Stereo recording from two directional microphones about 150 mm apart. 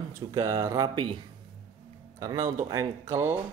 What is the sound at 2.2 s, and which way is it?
Speech, 20° right (ahead or behind).